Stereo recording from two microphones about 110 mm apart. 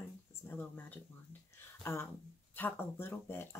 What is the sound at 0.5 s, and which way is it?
Speech, 15° left (ahead or behind).